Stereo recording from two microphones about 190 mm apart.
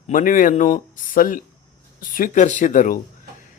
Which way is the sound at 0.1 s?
45° left (ahead or behind).